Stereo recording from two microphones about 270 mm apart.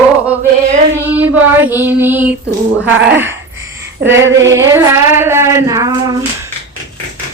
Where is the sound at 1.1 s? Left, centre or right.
Centre.